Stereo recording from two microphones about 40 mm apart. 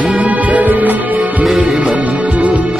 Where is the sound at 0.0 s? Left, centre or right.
Right.